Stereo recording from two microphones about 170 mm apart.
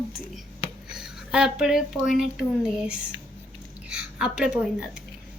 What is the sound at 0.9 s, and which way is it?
A woman's voice, 5° right (ahead or behind).